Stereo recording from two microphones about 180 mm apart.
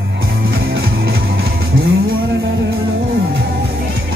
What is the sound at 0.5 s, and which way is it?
Music, 65° right (ahead or behind).